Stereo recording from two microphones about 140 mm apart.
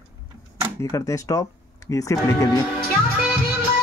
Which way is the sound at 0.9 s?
20° left (ahead or behind).